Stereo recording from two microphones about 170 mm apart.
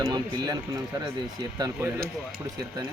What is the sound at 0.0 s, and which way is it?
Speech, 25° right (ahead or behind).